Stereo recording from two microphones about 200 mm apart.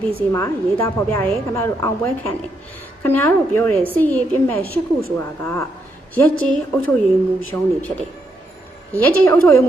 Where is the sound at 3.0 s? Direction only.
10° left (ahead or behind).